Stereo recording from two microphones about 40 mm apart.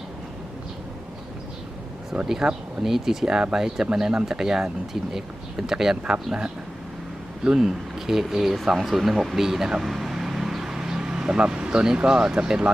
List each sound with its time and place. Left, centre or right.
2.2 s speech: centre
7.4 s speech: centre
7.9 s speech: centre
9.8 s vehicle: centre; by 11.9 s right
12.0 s speech: centre